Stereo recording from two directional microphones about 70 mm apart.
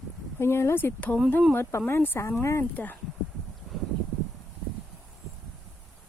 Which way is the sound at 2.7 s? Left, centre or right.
Left.